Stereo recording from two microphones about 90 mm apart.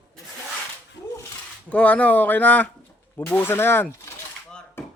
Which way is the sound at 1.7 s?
15° left (ahead or behind).